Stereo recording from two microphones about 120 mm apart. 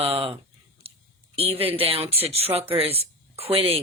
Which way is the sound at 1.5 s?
55° right (ahead or behind).